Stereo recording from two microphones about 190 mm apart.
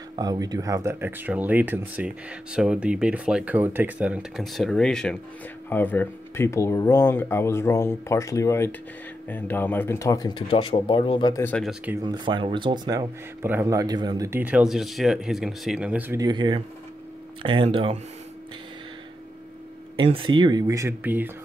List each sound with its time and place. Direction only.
0.1 s speech: 20° right (ahead or behind); by 11.4 s 25° left (ahead or behind)
11.4 s speech: 5° left (ahead or behind)
12.0 s speech: 25° right (ahead or behind)
20.0 s speech: 25° right (ahead or behind); by 21.3 s 10° right (ahead or behind)